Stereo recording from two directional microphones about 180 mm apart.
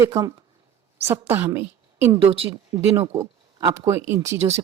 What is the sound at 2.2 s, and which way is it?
Speech, 30° right (ahead or behind).